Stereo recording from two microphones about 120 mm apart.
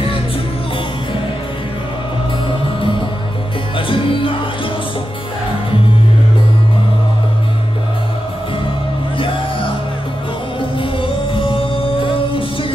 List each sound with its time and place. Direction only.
3.7 s music: 45° left (ahead or behind)
10.8 s music: 45° left (ahead or behind)